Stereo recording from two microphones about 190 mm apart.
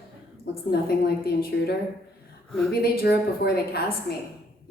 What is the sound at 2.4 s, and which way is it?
Speech, centre (ahead or behind).